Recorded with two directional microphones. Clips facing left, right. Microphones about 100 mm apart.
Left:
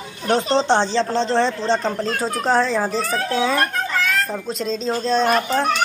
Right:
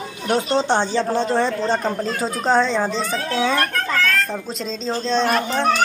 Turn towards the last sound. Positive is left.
turn(degrees=0)  # may be behind; listen again after turning